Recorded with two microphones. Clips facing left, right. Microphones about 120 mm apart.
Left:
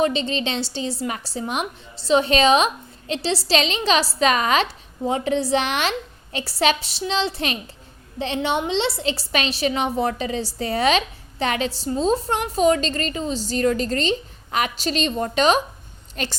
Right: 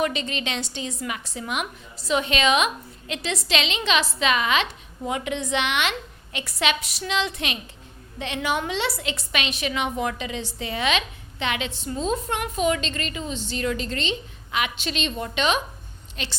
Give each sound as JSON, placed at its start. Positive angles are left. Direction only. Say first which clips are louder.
{"t": 0.0, "sound": "a woman's voice", "louder": "left 5 dB", "side_deg": 30}